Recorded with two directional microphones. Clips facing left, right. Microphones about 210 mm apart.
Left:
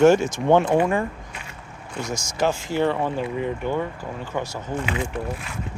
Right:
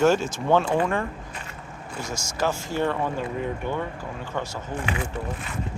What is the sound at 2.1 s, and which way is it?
Speech, 15° left (ahead or behind).